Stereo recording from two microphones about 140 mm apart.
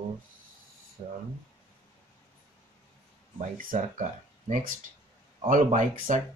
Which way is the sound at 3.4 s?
75° right (ahead or behind).